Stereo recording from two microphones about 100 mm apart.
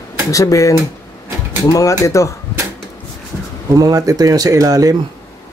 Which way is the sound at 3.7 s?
35° right (ahead or behind).